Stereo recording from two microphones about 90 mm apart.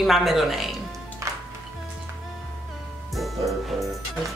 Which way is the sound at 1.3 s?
35° right (ahead or behind).